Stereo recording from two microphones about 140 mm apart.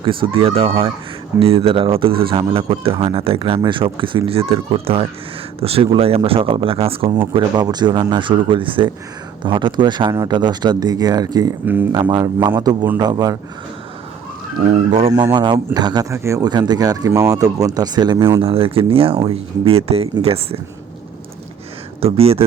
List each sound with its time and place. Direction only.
0.0 s speech: 35° right (ahead or behind)
7.3 s speech: 30° right (ahead or behind)
11.6 s speech: 15° right (ahead or behind)
11.9 s speech: 30° right (ahead or behind)
14.7 s speech: 50° right (ahead or behind)
15.1 s speech: 30° right (ahead or behind)
18.4 s speech: 40° right (ahead or behind)
22.0 s speech: 45° right (ahead or behind)